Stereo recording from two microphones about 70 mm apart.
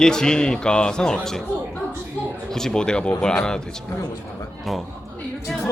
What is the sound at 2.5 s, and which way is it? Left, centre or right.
A man's voice, centre.